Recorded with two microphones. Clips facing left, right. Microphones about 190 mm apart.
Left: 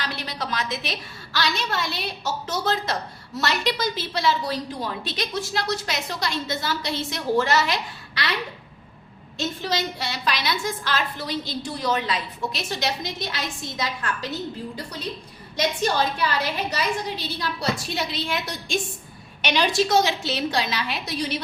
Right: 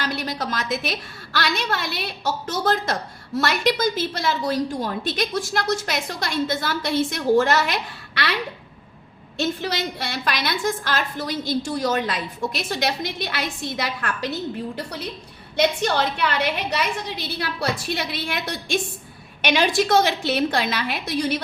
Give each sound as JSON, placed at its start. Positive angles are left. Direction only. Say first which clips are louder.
{"t": 0.0, "sound": "a woman's voice", "louder": "right 4 dB", "side_deg": -45}
{"t": 9.4, "sound": "a woman's voice", "louder": "right 2 dB", "side_deg": -60}
{"t": 19.5, "sound": "a woman's voice", "louder": "right 1 dB", "side_deg": -55}